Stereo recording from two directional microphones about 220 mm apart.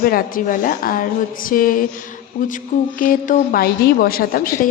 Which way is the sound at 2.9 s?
40° left (ahead or behind).